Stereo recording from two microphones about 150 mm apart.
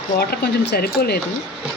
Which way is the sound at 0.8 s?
90° left.